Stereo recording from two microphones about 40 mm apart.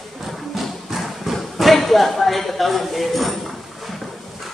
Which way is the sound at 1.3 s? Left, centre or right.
Centre.